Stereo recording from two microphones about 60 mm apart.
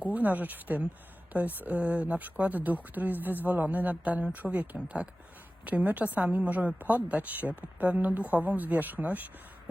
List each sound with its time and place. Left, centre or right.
0.0 s speech: right